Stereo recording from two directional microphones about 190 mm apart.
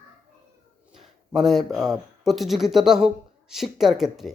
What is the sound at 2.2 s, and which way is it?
Speech, centre (ahead or behind).